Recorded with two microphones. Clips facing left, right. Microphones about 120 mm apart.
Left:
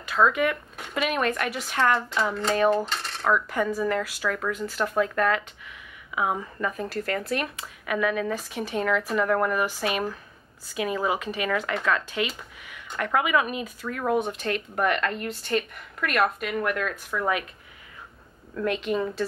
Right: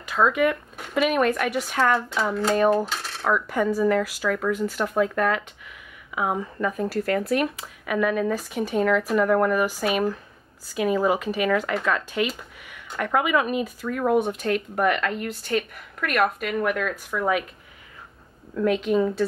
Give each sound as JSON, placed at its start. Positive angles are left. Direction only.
{"t": 0.2, "sound": "speech", "side_deg": -20}
{"t": 0.7, "sound": "speech", "side_deg": 0}
{"t": 4.7, "sound": "speech", "side_deg": -15}
{"t": 6.1, "sound": "speech", "side_deg": -5}
{"t": 7.8, "sound": "speech", "side_deg": 0}
{"t": 18.6, "sound": "speech", "side_deg": 0}